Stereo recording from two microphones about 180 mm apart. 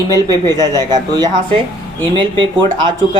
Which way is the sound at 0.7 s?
20° right (ahead or behind).